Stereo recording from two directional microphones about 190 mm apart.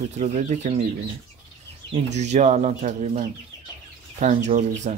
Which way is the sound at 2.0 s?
35° right (ahead or behind).